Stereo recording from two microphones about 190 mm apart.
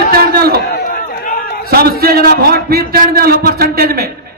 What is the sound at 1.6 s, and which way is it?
A man's voice, 55° right (ahead or behind).